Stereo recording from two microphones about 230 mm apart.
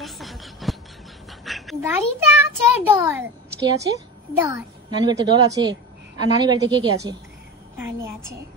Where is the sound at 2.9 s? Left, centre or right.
Centre.